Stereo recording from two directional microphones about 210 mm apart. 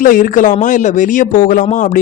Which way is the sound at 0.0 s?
40° left (ahead or behind).